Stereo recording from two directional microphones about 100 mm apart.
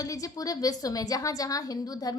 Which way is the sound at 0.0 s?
35° left (ahead or behind).